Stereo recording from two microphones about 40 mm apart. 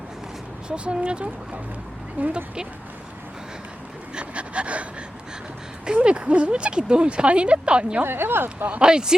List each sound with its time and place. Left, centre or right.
0.7 s speech: right
2.2 s speech: right
4.1 s a sound: right
5.8 s speech: right
8.0 s speech: right
8.8 s speech: centre